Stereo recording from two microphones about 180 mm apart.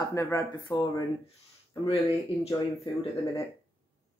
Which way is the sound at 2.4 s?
30° left (ahead or behind).